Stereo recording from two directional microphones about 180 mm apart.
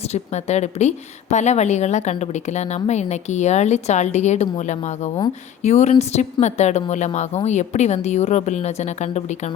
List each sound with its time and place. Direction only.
0.0 s speech: 40° left (ahead or behind)